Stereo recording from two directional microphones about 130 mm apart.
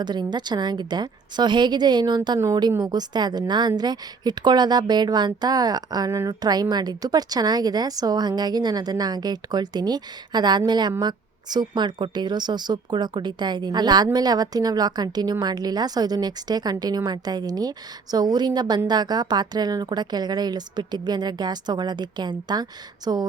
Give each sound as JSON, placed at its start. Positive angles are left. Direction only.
{"t": 0.0, "sound": "a woman's voice", "side_deg": -35}